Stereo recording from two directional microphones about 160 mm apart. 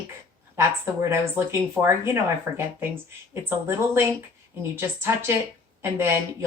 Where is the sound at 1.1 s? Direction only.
15° right (ahead or behind).